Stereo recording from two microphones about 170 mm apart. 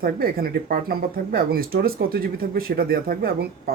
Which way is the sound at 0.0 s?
60° right (ahead or behind).